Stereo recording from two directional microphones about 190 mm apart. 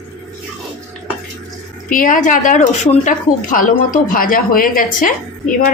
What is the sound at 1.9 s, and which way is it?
Speech, 45° left (ahead or behind).